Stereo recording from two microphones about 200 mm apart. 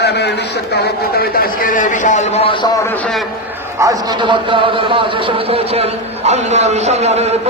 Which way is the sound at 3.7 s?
20° right (ahead or behind).